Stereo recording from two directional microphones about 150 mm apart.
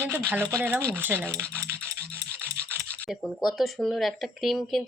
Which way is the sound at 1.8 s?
15° right (ahead or behind).